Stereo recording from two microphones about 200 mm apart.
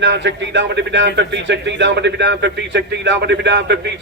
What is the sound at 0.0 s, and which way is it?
A man's voice, 65° right (ahead or behind).